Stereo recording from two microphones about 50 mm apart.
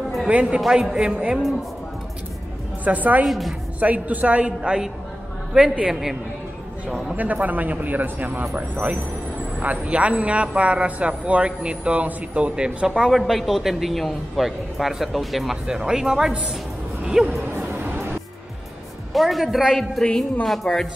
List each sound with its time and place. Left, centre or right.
0.3 s a man's voice: right
2.8 s a man's voice: right
3.3 s a man's voice: centre
3.8 s a man's voice: right
7.2 s a man's voice: right
13.1 s a man's voice: centre
17.6 s music: right
19.1 s a woman's voice: centre
19.4 s a man's voice: centre
20.0 s a woman's voice: centre
20.4 s a man's voice: centre